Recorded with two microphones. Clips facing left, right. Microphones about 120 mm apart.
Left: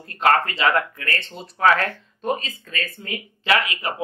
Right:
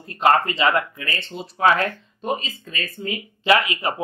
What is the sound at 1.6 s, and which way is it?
Speech, 15° right (ahead or behind).